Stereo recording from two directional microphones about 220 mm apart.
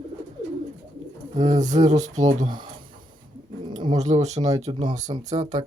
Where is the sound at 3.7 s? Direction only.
20° right (ahead or behind).